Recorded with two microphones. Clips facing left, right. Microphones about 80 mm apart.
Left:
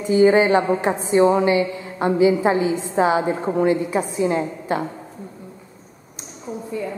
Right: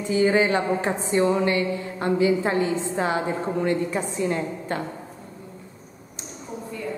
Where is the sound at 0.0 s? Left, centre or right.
Centre.